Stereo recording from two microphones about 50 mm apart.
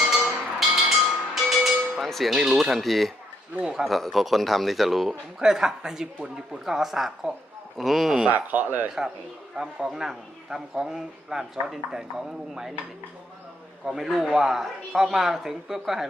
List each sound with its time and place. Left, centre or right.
0.0 s music: centre
3.7 s speech: centre
5.4 s a man's voice: centre
8.3 s speech: right
9.6 s a man's voice: centre
13.8 s a man's voice: centre